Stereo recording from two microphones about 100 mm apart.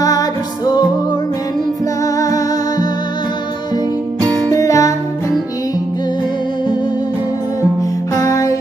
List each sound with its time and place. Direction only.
0.0 s music: 35° left (ahead or behind)
2.1 s music: 35° left (ahead or behind)
4.5 s music: 30° left (ahead or behind)
8.1 s music: 35° left (ahead or behind)